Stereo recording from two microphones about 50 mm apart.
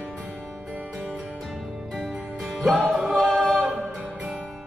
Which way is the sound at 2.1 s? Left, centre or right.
Right.